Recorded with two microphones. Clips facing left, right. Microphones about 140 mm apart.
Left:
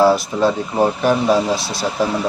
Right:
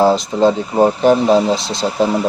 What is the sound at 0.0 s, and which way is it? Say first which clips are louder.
Speech: right 2 dB; 20° right (ahead or behind).